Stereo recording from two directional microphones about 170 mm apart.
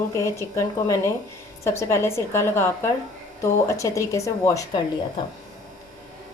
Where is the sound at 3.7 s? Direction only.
20° left (ahead or behind).